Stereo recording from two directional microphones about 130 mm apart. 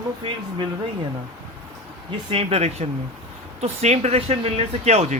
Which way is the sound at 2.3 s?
50° right (ahead or behind).